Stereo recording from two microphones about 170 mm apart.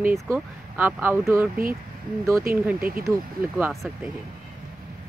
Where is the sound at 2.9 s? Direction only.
60° right (ahead or behind).